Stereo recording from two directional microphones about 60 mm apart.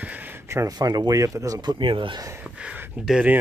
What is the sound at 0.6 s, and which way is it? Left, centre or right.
Speech, right.